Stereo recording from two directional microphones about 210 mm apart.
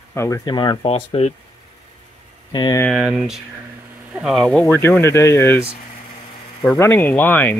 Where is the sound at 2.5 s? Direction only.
20° left (ahead or behind).